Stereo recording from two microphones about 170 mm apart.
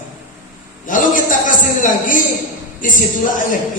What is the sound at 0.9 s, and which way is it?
Speech, 50° left (ahead or behind).